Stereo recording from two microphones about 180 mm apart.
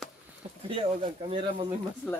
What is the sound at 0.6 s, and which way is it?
Speech, 30° right (ahead or behind).